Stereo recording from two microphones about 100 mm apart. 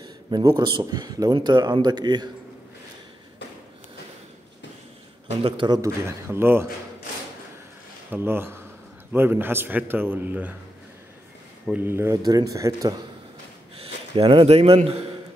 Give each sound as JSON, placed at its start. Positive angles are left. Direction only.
{"t": 0.3, "sound": "a man's voice", "side_deg": -45}
{"t": 5.7, "sound": "a man's voice", "side_deg": -30}
{"t": 8.1, "sound": "a man's voice", "side_deg": -20}
{"t": 11.7, "sound": "a man's voice", "side_deg": -20}
{"t": 12.2, "sound": "speech", "side_deg": -35}
{"t": 13.7, "sound": "speech", "side_deg": -70}